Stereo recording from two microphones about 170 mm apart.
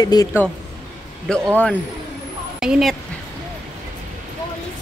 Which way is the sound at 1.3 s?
5° left (ahead or behind).